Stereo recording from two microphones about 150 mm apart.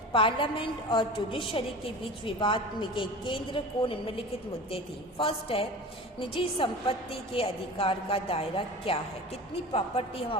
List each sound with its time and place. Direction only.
0.1 s a woman's voice: 35° left (ahead or behind)